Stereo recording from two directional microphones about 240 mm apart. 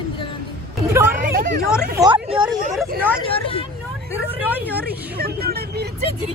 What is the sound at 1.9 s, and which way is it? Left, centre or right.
Speech, centre.